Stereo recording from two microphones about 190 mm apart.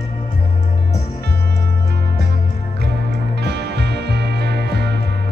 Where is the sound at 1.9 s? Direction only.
60° right (ahead or behind).